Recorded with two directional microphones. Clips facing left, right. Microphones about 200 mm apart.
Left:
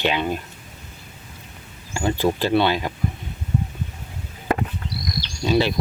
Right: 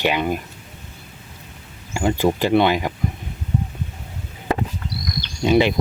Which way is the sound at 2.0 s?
15° right (ahead or behind).